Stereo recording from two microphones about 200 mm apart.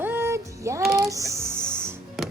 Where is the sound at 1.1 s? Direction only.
15° right (ahead or behind).